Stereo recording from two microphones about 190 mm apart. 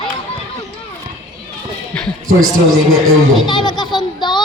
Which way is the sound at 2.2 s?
90° right.